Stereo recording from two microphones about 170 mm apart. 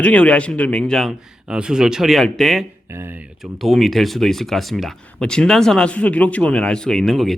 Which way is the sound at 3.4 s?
Centre (ahead or behind).